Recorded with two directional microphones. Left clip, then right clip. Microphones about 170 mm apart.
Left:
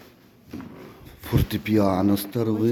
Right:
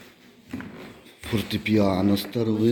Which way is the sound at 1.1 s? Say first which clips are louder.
Left 1 dB; 20° left (ahead or behind).